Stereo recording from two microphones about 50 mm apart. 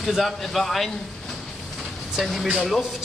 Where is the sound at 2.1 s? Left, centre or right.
Centre.